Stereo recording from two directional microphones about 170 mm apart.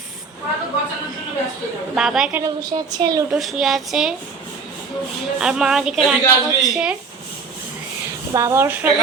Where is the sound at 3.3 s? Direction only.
Centre (ahead or behind).